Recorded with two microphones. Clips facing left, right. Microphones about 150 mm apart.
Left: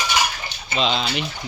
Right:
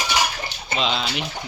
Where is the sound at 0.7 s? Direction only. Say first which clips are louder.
Left 2 dB; 5° right (ahead or behind).